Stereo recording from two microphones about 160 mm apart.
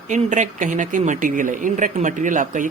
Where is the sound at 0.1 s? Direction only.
50° right (ahead or behind).